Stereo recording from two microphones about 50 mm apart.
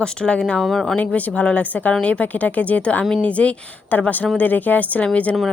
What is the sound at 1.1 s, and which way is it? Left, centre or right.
Speech, left.